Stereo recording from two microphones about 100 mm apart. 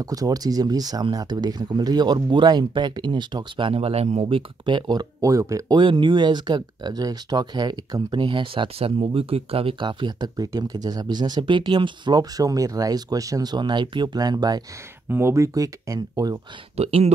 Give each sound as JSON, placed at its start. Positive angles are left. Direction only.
{"t": 0.0, "sound": "speech", "side_deg": -40}
{"t": 3.7, "sound": "speech", "side_deg": -90}
{"t": 5.8, "sound": "speech", "side_deg": -55}
{"t": 15.0, "sound": "speech", "side_deg": -25}
{"t": 16.7, "sound": "speech", "side_deg": -90}